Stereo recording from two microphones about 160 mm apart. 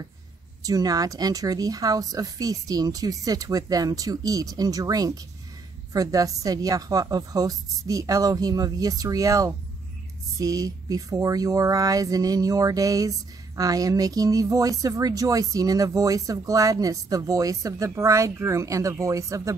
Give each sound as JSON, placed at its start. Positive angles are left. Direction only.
{"t": 0.6, "sound": "speech", "side_deg": -20}